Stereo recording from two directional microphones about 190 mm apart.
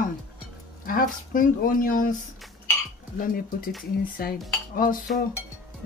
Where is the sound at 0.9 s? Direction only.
45° left (ahead or behind).